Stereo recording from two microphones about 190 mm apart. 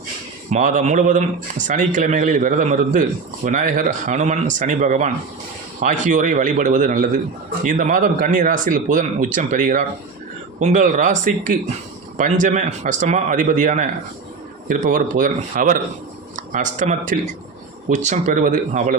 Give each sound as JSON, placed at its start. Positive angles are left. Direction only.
{"t": 0.5, "sound": "speech", "side_deg": -40}